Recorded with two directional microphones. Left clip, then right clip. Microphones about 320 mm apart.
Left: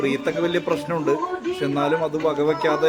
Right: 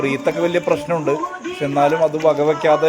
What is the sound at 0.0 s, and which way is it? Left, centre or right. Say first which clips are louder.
A man's voice: right 4 dB; centre.